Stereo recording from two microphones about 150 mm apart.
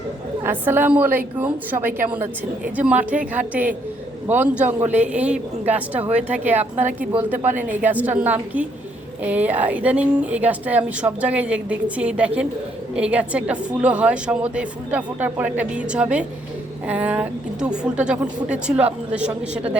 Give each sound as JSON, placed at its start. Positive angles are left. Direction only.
{"t": 0.4, "sound": "speech", "side_deg": -15}
{"t": 6.6, "sound": "speech", "side_deg": -55}
{"t": 7.8, "sound": "speech", "side_deg": -10}